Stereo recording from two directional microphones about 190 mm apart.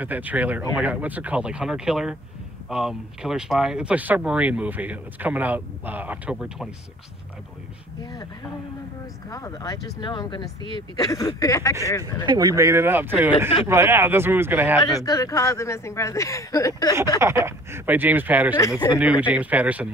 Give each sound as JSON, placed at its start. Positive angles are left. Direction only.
{"t": 0.0, "sound": "speech", "side_deg": -10}
{"t": 9.3, "sound": "speech", "side_deg": 20}
{"t": 12.3, "sound": "speech", "side_deg": -20}
{"t": 14.8, "sound": "speech", "side_deg": 20}
{"t": 17.2, "sound": "speech", "side_deg": -15}